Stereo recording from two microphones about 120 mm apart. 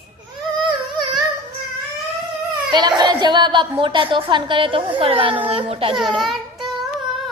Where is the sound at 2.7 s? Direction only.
40° right (ahead or behind).